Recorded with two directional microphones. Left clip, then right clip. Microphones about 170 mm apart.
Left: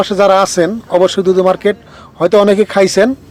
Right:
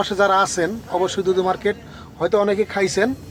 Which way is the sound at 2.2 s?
55° left (ahead or behind).